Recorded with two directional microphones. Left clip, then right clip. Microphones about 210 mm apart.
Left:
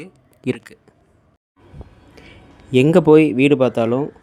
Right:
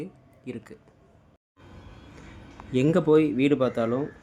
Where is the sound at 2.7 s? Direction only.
35° left (ahead or behind).